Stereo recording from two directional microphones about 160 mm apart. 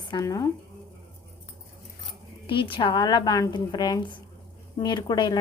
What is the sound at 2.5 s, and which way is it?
A woman's voice, 30° left (ahead or behind).